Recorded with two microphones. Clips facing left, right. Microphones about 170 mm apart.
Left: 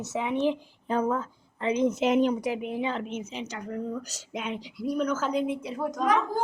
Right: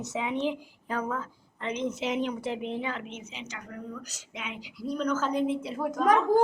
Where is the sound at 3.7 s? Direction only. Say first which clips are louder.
Left 9 dB; 30° left (ahead or behind).